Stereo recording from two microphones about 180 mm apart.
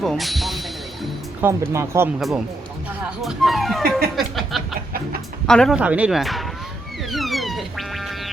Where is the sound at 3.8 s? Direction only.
55° right (ahead or behind).